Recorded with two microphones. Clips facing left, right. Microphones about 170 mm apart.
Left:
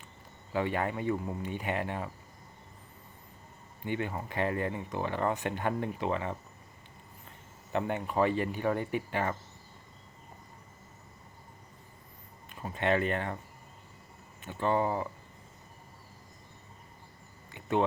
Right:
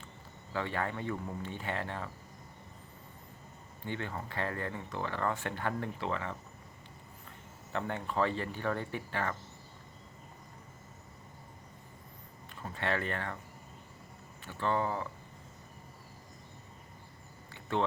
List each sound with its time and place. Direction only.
0.5 s speech: 15° left (ahead or behind)
3.8 s speech: 15° left (ahead or behind)
7.7 s speech: 15° left (ahead or behind)
12.5 s speech: 20° left (ahead or behind)
14.4 s speech: 20° left (ahead or behind)
17.5 s a sound: 15° left (ahead or behind)